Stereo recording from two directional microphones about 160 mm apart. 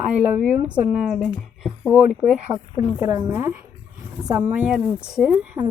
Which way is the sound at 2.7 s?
45° left (ahead or behind).